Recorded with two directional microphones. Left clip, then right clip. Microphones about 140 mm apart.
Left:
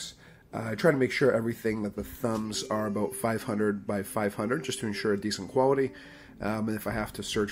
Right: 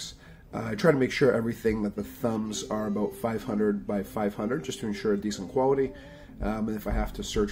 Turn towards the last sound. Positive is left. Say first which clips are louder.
# right 1 dB
turn(degrees=15)  # may be behind; listen again after turning